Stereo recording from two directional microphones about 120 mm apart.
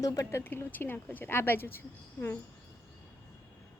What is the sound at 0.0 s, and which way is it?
Speech, 30° left (ahead or behind).